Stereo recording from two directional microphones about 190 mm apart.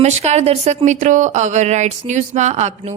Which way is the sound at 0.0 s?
35° right (ahead or behind).